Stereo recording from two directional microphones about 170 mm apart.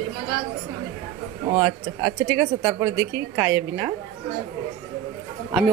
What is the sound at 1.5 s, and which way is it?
Speech, 20° right (ahead or behind).